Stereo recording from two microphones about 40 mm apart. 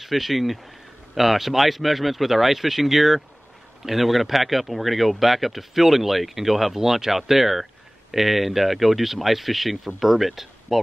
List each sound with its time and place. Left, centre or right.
0.0 s speech: centre